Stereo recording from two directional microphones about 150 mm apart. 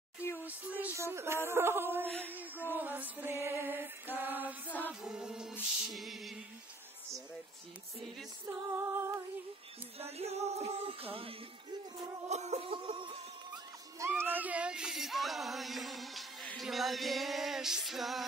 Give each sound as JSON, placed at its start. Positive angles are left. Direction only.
{"t": 0.4, "sound": "a sound", "side_deg": -10}
{"t": 2.7, "sound": "music", "side_deg": -10}
{"t": 4.6, "sound": "music", "side_deg": 10}
{"t": 5.0, "sound": "music", "side_deg": -5}
{"t": 8.7, "sound": "music", "side_deg": -15}
{"t": 9.9, "sound": "music", "side_deg": -45}
{"t": 12.3, "sound": "a sound", "side_deg": -50}
{"t": 13.9, "sound": "music", "side_deg": -15}